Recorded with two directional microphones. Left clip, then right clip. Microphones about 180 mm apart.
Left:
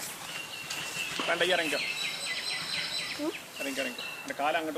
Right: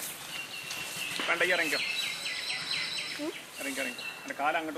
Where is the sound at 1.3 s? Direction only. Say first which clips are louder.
Even; 50° left (ahead or behind).